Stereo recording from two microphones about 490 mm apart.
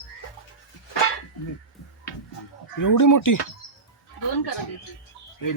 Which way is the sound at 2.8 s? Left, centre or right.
Left.